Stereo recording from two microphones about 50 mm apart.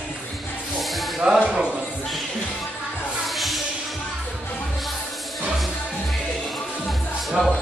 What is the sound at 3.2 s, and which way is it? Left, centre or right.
Music, centre.